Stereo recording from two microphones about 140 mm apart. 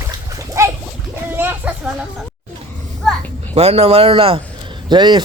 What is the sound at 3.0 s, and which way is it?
Children playing, 10° left (ahead or behind).